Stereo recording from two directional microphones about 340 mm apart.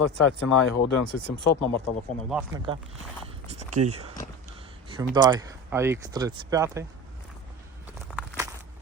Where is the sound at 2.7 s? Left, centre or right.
Centre.